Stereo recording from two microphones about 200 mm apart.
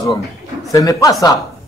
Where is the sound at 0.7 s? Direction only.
15° left (ahead or behind).